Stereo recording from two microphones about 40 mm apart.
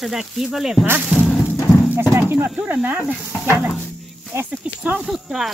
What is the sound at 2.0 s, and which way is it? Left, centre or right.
Speech, right.